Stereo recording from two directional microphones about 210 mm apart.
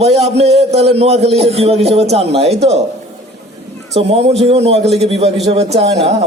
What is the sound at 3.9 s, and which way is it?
A man's voice, 30° right (ahead or behind).